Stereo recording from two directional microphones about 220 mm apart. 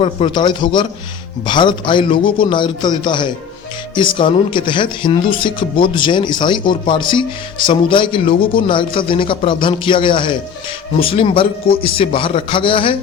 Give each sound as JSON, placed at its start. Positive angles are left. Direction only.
{"t": 0.0, "sound": "speech", "side_deg": 25}